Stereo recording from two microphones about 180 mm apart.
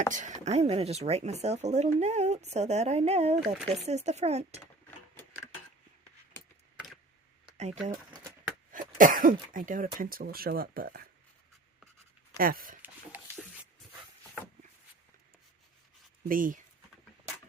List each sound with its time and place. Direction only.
0.1 s speech: 45° right (ahead or behind)
6.7 s computer keyboard: centre (ahead or behind)
7.5 s speech: 40° right (ahead or behind); by 11.1 s 55° right (ahead or behind)
12.4 s speech: 55° right (ahead or behind)
12.8 s a sound: 10° right (ahead or behind)
16.3 s speech: 50° right (ahead or behind)